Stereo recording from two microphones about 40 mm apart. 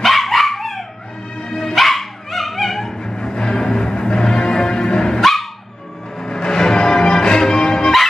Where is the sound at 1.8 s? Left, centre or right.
Centre.